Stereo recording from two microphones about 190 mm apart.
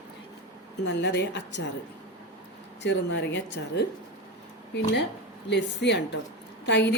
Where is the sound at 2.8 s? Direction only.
70° left (ahead or behind).